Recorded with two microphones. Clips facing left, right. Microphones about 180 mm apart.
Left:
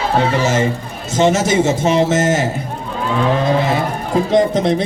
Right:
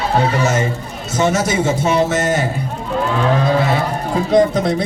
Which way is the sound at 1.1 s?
25° left (ahead or behind).